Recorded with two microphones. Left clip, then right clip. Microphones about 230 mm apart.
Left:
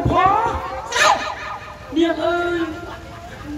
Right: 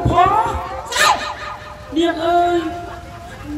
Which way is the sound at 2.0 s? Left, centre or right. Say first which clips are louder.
Right 1 dB; right.